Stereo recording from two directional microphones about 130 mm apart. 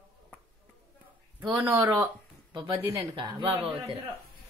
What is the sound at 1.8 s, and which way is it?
Speech, 25° right (ahead or behind).